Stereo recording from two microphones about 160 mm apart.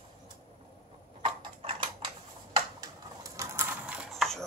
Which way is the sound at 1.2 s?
30° right (ahead or behind).